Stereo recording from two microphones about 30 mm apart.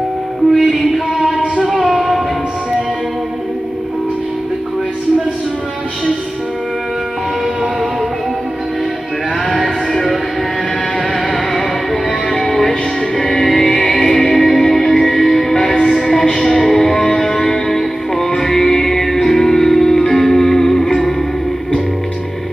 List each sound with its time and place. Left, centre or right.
1.1 s music: right
2.0 s music: centre
11.1 s music: centre